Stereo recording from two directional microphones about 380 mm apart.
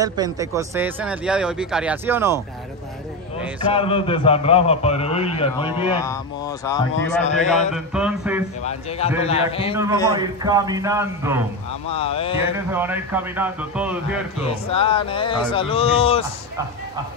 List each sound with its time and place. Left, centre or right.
0.0 s speech: centre
3.7 s a man's voice: centre
7.7 s speech: centre
8.6 s a man's voice: centre
10.1 s a man's voice: centre
11.9 s a man's voice: centre
12.5 s speech: centre
14.4 s a man's voice: centre